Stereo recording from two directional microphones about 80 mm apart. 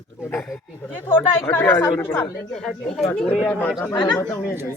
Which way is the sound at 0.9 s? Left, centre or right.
Left.